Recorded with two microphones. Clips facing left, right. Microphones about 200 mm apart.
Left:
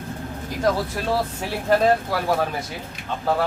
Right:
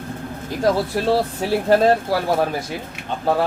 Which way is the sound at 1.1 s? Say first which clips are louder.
Right 5 dB; 30° right (ahead or behind).